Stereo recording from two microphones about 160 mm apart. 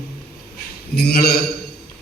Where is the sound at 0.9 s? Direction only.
80° left.